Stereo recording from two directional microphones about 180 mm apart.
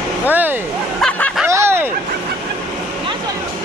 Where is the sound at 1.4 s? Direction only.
15° right (ahead or behind).